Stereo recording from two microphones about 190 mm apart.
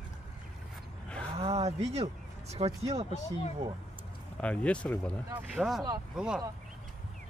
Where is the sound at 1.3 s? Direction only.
35° right (ahead or behind).